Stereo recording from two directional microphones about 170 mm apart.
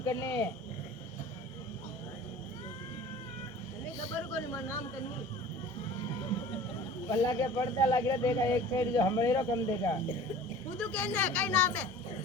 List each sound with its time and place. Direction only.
0.0 s speech: 20° left (ahead or behind)
4.4 s speech: 15° left (ahead or behind)
7.1 s speech: 20° left (ahead or behind)